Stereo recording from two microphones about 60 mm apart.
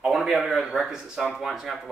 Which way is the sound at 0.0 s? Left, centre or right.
Centre.